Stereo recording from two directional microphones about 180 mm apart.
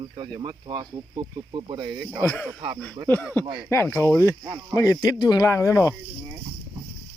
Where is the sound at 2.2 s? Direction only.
5° left (ahead or behind).